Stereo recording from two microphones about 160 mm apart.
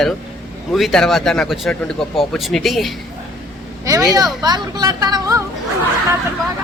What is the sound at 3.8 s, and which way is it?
Speech, 20° right (ahead or behind).